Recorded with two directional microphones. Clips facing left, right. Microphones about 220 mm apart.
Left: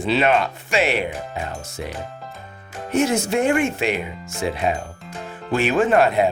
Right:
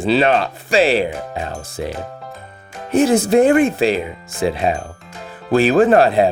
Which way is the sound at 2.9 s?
35° right (ahead or behind).